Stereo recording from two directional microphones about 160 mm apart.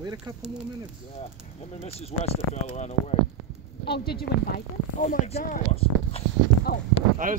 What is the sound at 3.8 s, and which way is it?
Speech, 90° left.